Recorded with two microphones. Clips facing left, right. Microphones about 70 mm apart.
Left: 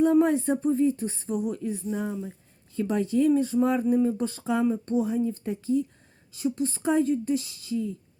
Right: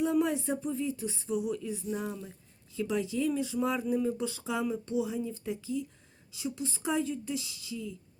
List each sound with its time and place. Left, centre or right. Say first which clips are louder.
0.0 s speech: left 7 dB; left